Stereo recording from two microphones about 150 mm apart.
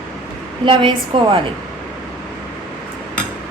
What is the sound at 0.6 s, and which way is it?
Speech, 35° right (ahead or behind).